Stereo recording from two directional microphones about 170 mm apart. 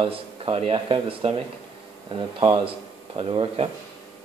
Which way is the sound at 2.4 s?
30° right (ahead or behind).